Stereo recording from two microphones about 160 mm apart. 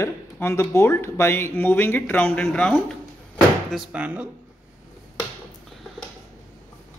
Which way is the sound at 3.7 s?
10° right (ahead or behind).